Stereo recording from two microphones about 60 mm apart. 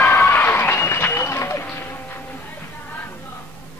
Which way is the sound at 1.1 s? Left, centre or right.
Left.